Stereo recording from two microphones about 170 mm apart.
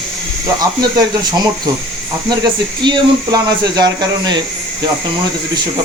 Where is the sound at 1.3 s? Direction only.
25° right (ahead or behind).